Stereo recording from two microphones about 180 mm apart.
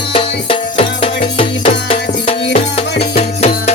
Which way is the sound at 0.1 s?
30° left (ahead or behind).